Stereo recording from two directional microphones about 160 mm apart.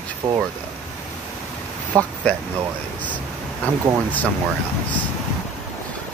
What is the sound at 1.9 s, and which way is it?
Speech, 5° left (ahead or behind).